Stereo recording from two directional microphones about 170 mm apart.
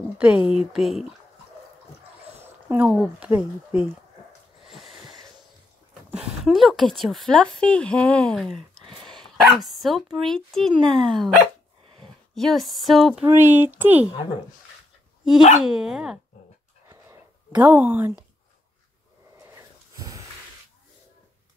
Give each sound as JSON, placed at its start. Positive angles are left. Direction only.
{"t": 0.2, "sound": "a woman's voice", "side_deg": -10}
{"t": 2.4, "sound": "speech", "side_deg": -10}
{"t": 6.1, "sound": "a woman's voice", "side_deg": 0}
{"t": 12.4, "sound": "a woman's voice", "side_deg": 0}
{"t": 13.2, "sound": "speech", "side_deg": -15}
{"t": 15.6, "sound": "a woman's voice", "side_deg": -5}
{"t": 16.9, "sound": "a sound", "side_deg": -15}
{"t": 19.5, "sound": "dog", "side_deg": -20}